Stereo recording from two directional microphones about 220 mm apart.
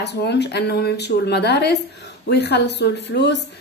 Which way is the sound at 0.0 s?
50° left (ahead or behind).